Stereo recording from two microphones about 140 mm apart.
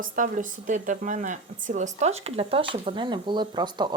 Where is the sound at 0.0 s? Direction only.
70° right (ahead or behind).